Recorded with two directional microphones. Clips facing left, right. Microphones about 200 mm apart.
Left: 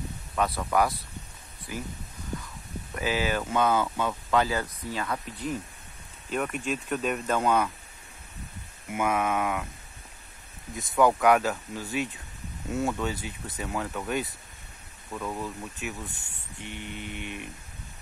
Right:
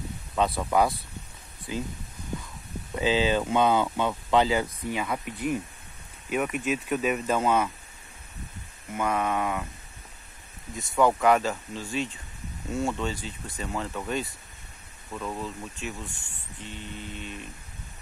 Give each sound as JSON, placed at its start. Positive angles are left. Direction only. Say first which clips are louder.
{"t": 0.4, "sound": "speech", "louder": "right 2 dB", "side_deg": -15}
{"t": 2.9, "sound": "speech", "louder": "right 4 dB", "side_deg": -20}
{"t": 8.9, "sound": "speech", "louder": "even", "side_deg": 5}
{"t": 10.7, "sound": "speech", "louder": "even", "side_deg": 0}
{"t": 16.1, "sound": "speech", "louder": "right 1 dB", "side_deg": 20}